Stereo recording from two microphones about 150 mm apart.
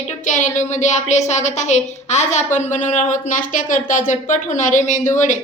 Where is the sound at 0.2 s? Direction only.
55° left (ahead or behind).